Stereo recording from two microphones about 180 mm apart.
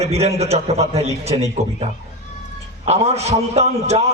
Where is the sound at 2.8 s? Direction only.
35° right (ahead or behind).